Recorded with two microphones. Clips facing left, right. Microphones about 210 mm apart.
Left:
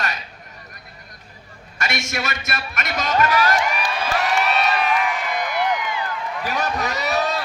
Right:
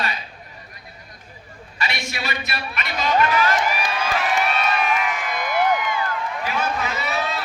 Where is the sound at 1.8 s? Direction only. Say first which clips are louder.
Left 2 dB; 45° left (ahead or behind).